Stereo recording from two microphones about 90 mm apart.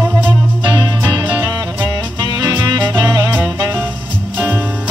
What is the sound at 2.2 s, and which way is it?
Music, 45° right (ahead or behind).